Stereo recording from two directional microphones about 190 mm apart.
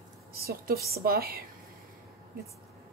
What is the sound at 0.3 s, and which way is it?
Speech, 50° right (ahead or behind).